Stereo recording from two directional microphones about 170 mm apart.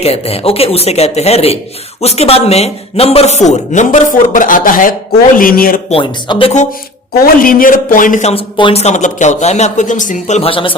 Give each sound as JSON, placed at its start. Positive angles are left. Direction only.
{"t": 0.0, "sound": "speech", "side_deg": 35}
{"t": 5.9, "sound": "speech", "side_deg": 30}
{"t": 7.4, "sound": "speech", "side_deg": 55}
{"t": 8.5, "sound": "speech", "side_deg": 35}